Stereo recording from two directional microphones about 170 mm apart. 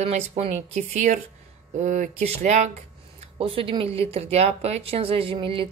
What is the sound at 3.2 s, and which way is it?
A woman's voice, 35° right (ahead or behind).